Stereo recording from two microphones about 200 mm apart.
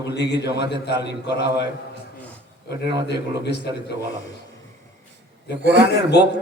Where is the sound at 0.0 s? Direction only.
60° left (ahead or behind).